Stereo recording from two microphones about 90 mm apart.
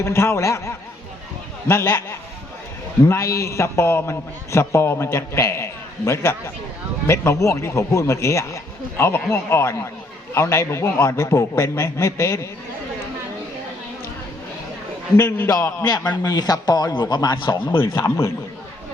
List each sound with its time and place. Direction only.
0.0 s a man's voice: 30° left (ahead or behind)
15.1 s a man's voice: 30° left (ahead or behind)
15.8 s a man's voice: 45° left (ahead or behind); by 17.7 s 65° left (ahead or behind)